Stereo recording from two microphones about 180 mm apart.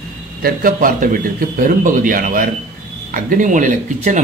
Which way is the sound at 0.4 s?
50° right (ahead or behind).